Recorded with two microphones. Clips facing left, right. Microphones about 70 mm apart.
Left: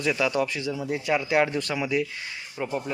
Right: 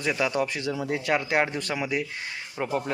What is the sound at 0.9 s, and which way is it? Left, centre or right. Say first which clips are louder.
Speech: left 1 dB; right.